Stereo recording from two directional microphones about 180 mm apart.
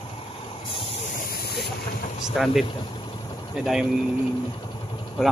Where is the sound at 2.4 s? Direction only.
Centre (ahead or behind).